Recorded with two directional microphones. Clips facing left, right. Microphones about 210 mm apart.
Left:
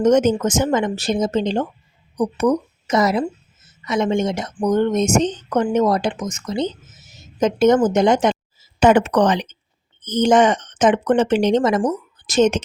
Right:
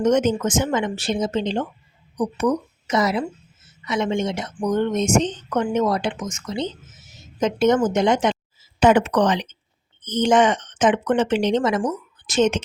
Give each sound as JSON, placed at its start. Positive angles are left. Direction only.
{"t": 0.0, "sound": "speech", "side_deg": 40}